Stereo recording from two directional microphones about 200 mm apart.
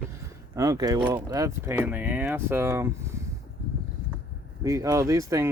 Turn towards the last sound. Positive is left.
turn(degrees=-15)  # may be behind; listen again after turning